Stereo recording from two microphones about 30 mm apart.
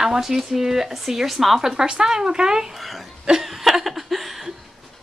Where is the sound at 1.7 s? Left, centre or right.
Right.